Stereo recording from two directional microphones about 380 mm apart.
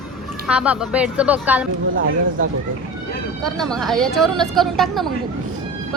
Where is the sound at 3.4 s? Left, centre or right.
Centre.